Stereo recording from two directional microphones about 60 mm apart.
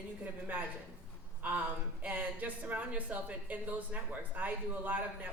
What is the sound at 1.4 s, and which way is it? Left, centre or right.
A woman's voice, right.